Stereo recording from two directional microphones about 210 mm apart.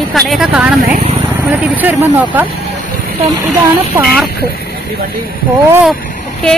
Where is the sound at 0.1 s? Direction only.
Centre (ahead or behind).